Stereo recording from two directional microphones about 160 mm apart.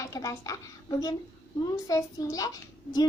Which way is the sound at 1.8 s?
20° left (ahead or behind).